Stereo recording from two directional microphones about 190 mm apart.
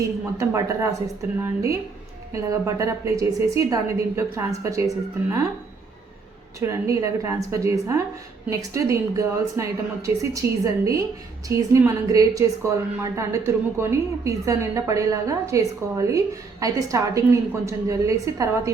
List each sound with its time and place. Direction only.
0.3 s a woman's voice: 15° right (ahead or behind)
6.6 s a woman's voice: 15° right (ahead or behind)